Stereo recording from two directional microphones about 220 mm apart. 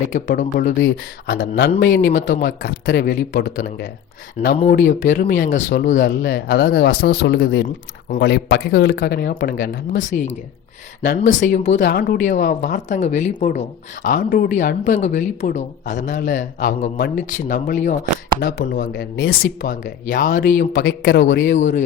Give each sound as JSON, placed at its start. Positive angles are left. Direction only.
{"t": 0.1, "sound": "speech", "side_deg": 35}
{"t": 1.3, "sound": "speech", "side_deg": 45}
{"t": 10.0, "sound": "speech", "side_deg": 35}
{"t": 11.3, "sound": "speech", "side_deg": 35}
{"t": 11.9, "sound": "speech", "side_deg": 45}
{"t": 20.7, "sound": "a man's voice", "side_deg": 50}
{"t": 21.4, "sound": "speech", "side_deg": 35}